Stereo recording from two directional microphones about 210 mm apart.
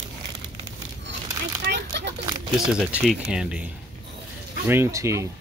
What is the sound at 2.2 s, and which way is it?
Crumpling, 20° right (ahead or behind).